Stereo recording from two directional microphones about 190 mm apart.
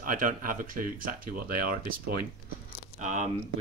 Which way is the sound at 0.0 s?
45° right (ahead or behind).